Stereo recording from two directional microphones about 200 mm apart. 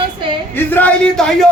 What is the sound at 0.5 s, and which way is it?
Speech, 10° left (ahead or behind).